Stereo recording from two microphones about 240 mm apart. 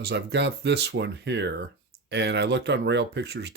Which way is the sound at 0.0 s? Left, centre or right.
Right.